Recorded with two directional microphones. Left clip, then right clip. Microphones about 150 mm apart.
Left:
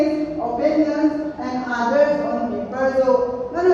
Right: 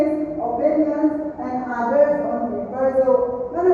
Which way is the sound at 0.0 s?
35° right (ahead or behind).